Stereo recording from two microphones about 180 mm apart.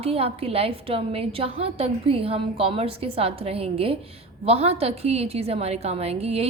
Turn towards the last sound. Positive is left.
turn(degrees=-35)  # may be behind; listen again after turning